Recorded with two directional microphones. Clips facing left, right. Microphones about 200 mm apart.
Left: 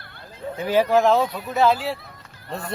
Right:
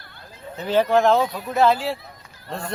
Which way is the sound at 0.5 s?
10° left (ahead or behind).